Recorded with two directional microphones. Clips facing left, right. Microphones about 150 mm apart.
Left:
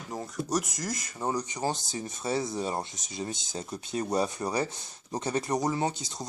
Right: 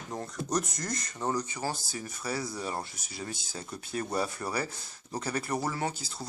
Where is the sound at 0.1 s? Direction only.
Centre (ahead or behind).